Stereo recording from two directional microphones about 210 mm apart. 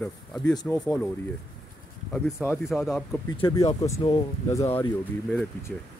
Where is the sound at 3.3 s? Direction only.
20° left (ahead or behind); by 5.7 s 5° left (ahead or behind).